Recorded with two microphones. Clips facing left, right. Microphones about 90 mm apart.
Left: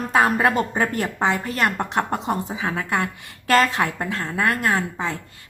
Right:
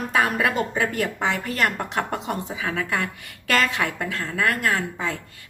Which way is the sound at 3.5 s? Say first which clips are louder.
Left 4 dB; 35° left (ahead or behind).